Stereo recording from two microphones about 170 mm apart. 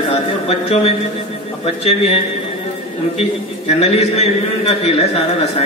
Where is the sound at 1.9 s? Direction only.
35° left (ahead or behind).